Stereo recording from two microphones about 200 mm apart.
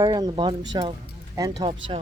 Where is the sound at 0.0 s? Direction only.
20° right (ahead or behind).